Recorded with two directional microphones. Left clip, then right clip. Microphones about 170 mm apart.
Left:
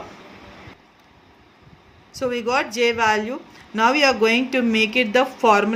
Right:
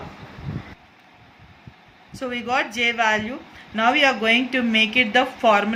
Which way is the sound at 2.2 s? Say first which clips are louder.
Left 2 dB; 40° left (ahead or behind).